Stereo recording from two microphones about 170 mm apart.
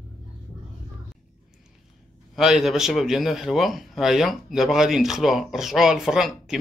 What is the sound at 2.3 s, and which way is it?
A man's voice, centre (ahead or behind).